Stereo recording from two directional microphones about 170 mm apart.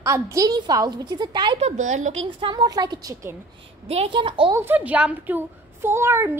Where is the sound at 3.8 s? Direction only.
35° right (ahead or behind).